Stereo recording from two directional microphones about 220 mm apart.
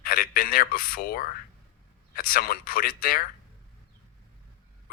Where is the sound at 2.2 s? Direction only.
40° left (ahead or behind).